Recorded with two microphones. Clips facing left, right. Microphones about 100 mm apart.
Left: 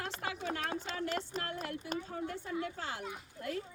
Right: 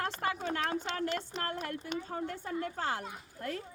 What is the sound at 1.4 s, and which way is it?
Speech, 45° right (ahead or behind).